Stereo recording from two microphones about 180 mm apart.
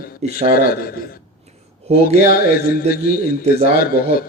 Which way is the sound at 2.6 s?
55° left (ahead or behind).